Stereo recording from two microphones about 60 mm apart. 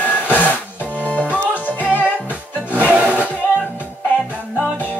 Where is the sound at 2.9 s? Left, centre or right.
Right.